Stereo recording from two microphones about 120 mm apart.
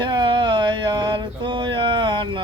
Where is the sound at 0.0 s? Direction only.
40° right (ahead or behind).